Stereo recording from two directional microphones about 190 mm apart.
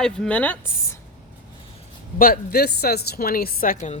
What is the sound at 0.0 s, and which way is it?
Speech, 5° left (ahead or behind).